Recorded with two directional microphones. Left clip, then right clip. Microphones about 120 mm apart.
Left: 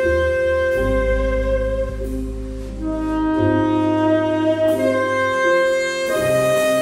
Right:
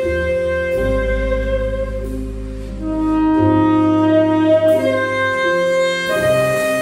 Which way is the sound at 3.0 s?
20° left (ahead or behind).